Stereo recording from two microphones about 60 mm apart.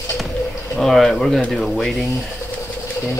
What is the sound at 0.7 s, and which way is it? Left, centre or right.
Speech, centre.